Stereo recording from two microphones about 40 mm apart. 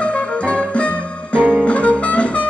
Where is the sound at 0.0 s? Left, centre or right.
Left.